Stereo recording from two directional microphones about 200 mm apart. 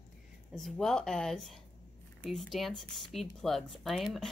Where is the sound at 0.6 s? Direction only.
Centre (ahead or behind).